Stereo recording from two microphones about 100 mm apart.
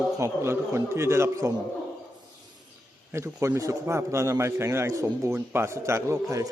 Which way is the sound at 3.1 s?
25° right (ahead or behind).